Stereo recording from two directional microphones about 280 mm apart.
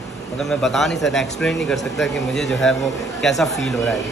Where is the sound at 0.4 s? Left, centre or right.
Centre.